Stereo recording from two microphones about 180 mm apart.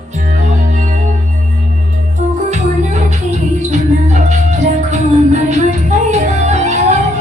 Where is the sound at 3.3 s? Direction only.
40° right (ahead or behind).